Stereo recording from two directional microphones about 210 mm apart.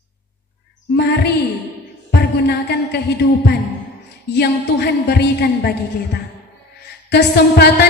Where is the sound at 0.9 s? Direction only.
50° left (ahead or behind).